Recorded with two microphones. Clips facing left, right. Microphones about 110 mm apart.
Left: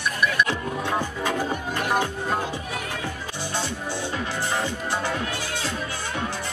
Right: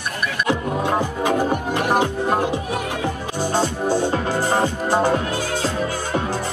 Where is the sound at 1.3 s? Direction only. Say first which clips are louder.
Right 7 dB; 55° right (ahead or behind).